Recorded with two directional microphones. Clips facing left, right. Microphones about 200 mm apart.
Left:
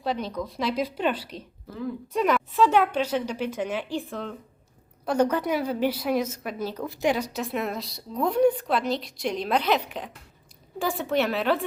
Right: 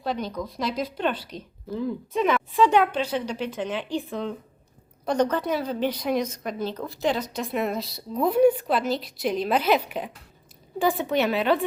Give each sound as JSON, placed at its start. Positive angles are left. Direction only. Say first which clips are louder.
{"t": 0.0, "sound": "a woman's voice", "louder": "even", "side_deg": 0}
{"t": 1.3, "sound": "speech", "louder": "right 1 dB", "side_deg": 30}
{"t": 2.1, "sound": "a woman's voice", "louder": "even", "side_deg": 5}